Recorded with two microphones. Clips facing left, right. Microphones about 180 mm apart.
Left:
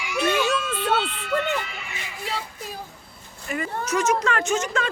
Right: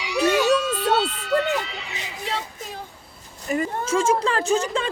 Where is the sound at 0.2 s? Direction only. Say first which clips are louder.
Right 4 dB; 40° right (ahead or behind).